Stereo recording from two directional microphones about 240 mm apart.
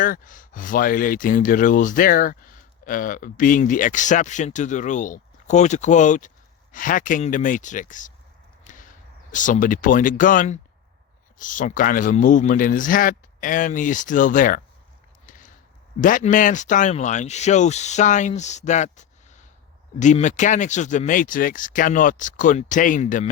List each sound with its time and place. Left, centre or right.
0.0 s speech: left
15.3 s a sound: left
16.0 s speech: left